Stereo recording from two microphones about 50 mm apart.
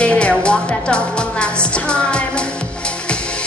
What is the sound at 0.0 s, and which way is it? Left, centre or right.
Music, left.